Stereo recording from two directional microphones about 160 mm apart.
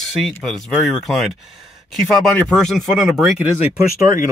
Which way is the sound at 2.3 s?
5° left (ahead or behind).